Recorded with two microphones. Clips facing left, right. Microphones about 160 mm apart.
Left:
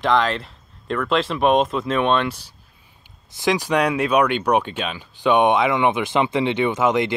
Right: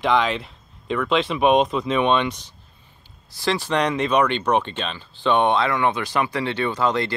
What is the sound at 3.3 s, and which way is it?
Speech, 15° left (ahead or behind).